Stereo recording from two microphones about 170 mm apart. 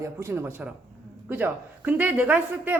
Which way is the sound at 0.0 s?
15° right (ahead or behind).